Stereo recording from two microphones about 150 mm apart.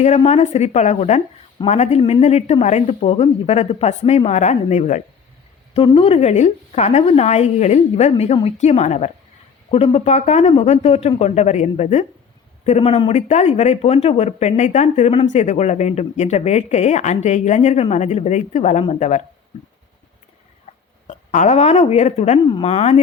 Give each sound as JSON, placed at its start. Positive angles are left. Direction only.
{"t": 0.2, "sound": "speech", "side_deg": 45}
{"t": 5.7, "sound": "speech", "side_deg": 35}
{"t": 21.1, "sound": "speech", "side_deg": 55}